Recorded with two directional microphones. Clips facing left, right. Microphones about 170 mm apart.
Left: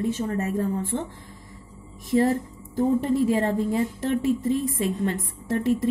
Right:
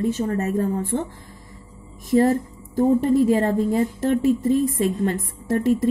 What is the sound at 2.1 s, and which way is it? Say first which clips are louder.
A woman's voice: right 4 dB; 45° right (ahead or behind).